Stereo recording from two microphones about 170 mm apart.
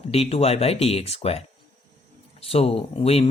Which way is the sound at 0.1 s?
35° left (ahead or behind).